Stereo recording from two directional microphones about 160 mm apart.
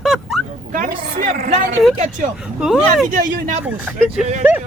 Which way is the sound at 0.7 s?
60° right (ahead or behind).